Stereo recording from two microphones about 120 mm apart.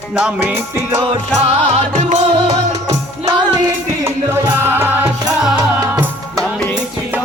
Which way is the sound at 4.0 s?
20° right (ahead or behind).